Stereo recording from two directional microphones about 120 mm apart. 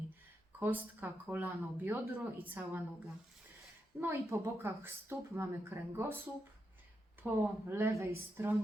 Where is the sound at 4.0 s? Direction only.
20° right (ahead or behind).